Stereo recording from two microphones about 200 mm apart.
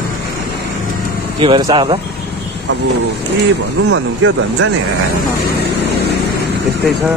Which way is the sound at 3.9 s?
75° right (ahead or behind).